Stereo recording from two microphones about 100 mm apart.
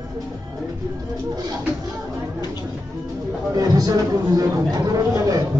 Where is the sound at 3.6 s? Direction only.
40° right (ahead or behind).